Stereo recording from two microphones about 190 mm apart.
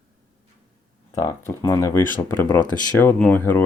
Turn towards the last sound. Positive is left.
turn(degrees=10)  # may be behind; listen again after turning